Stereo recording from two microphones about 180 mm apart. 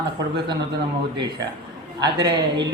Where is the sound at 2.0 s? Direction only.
25° right (ahead or behind).